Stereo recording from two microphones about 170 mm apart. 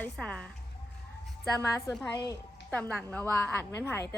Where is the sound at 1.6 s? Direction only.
15° left (ahead or behind).